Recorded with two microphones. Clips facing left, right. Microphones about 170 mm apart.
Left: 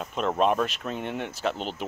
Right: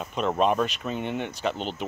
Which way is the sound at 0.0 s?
Centre (ahead or behind).